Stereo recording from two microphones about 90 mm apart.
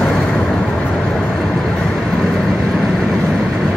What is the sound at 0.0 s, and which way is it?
Vehicle, 5° left (ahead or behind).